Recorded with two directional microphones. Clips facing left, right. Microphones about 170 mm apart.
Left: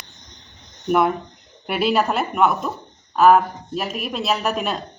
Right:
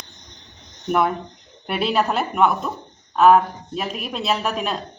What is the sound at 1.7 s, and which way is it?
Speech, centre (ahead or behind).